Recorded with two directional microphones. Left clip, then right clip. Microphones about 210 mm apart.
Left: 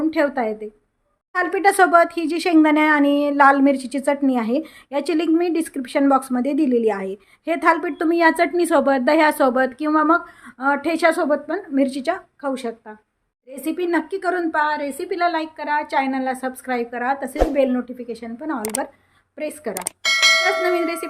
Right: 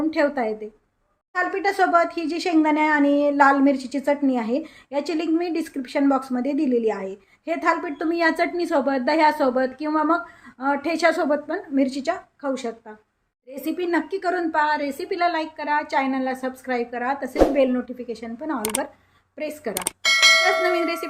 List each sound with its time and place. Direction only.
0.0 s speech: 20° left (ahead or behind)
1.3 s a woman's voice: 30° left (ahead or behind)
19.7 s bell: centre (ahead or behind)
20.7 s a woman's voice: 15° left (ahead or behind)